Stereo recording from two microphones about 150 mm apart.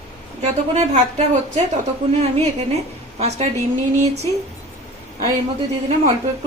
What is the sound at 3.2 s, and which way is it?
Speech, 45° right (ahead or behind).